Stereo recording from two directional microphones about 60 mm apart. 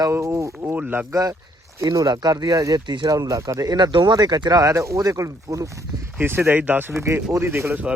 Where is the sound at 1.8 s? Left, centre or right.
Right.